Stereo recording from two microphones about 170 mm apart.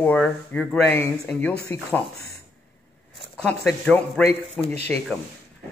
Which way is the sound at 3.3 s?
Centre (ahead or behind).